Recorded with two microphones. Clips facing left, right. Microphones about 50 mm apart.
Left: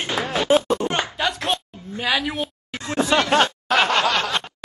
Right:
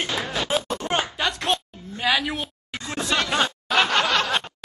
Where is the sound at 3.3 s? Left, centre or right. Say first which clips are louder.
Left 5 dB; left.